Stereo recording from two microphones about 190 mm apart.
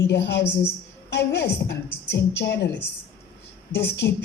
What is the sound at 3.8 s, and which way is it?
Speech, 60° left (ahead or behind).